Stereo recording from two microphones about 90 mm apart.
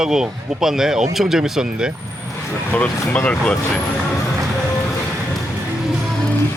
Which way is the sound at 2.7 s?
20° left (ahead or behind).